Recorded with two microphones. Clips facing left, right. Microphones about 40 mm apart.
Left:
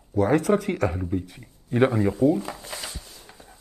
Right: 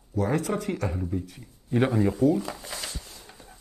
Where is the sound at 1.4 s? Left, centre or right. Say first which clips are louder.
Left 4 dB; centre.